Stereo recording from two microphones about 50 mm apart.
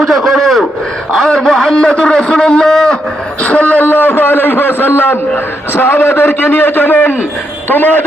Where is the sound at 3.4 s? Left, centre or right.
Left.